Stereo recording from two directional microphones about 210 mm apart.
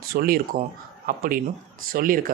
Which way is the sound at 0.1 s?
45° right (ahead or behind).